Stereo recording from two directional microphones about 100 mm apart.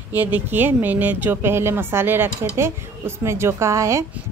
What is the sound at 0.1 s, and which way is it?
Speech, 20° right (ahead or behind).